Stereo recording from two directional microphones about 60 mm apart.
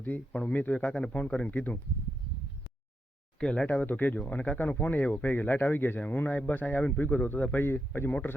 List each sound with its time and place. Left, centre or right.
0.0 s speech: left
3.4 s speech: centre
3.7 s speech: left
7.0 s speech: left